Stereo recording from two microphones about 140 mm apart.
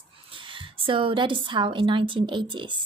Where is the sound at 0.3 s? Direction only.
40° right (ahead or behind).